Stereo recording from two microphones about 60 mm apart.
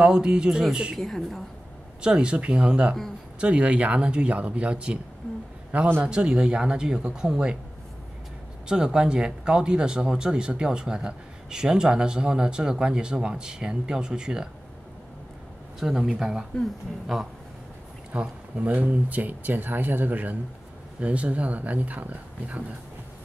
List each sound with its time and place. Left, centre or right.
0.0 s speech: centre
0.9 s a woman's voice: centre
2.0 s speech: centre
8.6 s speech: centre
15.8 s a woman's voice: centre
18.1 s speech: right